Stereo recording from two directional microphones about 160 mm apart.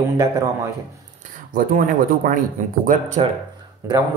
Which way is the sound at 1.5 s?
60° right (ahead or behind).